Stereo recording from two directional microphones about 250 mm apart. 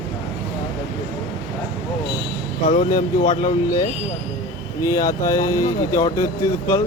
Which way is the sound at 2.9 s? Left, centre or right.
Centre.